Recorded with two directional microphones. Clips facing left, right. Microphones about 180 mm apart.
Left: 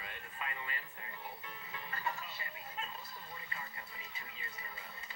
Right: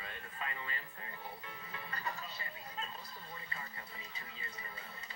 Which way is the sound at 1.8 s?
35° right (ahead or behind).